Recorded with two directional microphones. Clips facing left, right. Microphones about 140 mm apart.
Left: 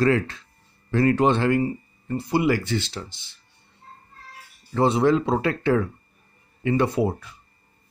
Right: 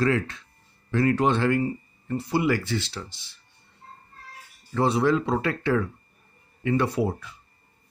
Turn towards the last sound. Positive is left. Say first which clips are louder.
# left 2 dB
turn(degrees=20)  # may be behind; listen again after turning